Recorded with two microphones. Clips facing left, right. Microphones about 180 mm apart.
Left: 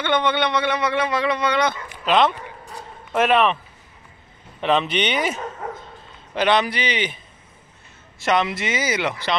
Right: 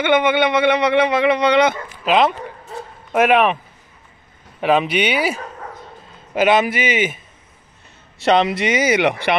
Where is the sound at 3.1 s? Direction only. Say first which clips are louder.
Right 3 dB; 10° right (ahead or behind).